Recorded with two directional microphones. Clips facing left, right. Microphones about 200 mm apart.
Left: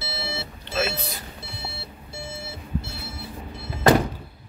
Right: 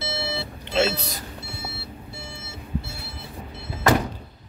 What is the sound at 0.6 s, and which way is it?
Alarm clock, 25° right (ahead or behind).